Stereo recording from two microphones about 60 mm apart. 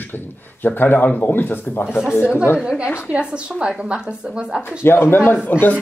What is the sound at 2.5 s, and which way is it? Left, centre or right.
Speech, centre.